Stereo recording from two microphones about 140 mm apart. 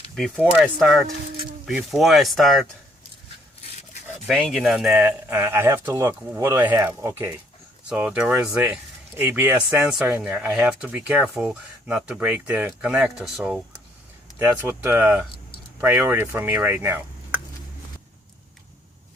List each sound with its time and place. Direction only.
0.2 s speech: 5° right (ahead or behind)
4.3 s speech: 5° left (ahead or behind)
5.3 s speech: 15° right (ahead or behind)